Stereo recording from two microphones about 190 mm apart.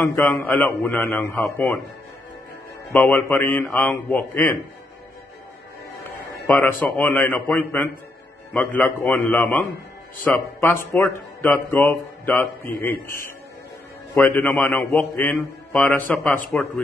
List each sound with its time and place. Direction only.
0.0 s speech: 10° left (ahead or behind)
2.9 s speech: 5° left (ahead or behind)
6.4 s speech: 10° left (ahead or behind)
14.1 s speech: 10° left (ahead or behind)